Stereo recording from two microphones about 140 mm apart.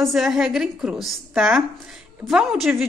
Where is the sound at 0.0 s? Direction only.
Centre (ahead or behind).